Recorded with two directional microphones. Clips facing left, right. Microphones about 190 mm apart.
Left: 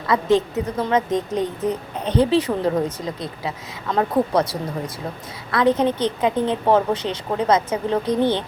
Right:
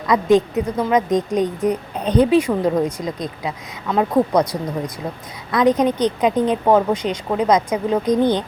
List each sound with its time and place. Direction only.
0.1 s a woman's voice: 15° right (ahead or behind)